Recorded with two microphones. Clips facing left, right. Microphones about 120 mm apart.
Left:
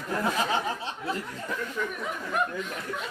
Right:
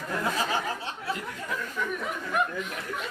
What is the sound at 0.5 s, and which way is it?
Speech, 25° left (ahead or behind).